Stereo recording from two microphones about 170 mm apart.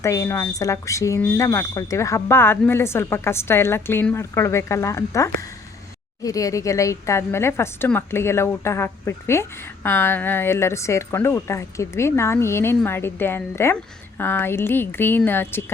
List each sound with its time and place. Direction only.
0.0 s a woman's voice: 15° left (ahead or behind)